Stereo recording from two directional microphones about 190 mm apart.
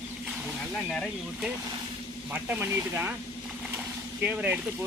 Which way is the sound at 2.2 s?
10° right (ahead or behind).